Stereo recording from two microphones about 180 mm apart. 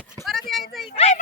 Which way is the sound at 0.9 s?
35° left (ahead or behind).